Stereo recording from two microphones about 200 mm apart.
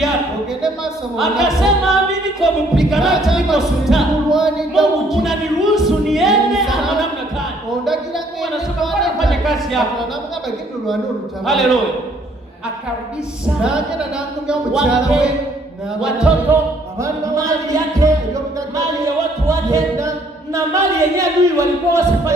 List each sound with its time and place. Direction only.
1.2 s a capella: centre (ahead or behind)
2.4 s music: centre (ahead or behind)
11.4 s music: centre (ahead or behind)
13.6 s music: 5° right (ahead or behind)
17.0 s speech: 15° right (ahead or behind)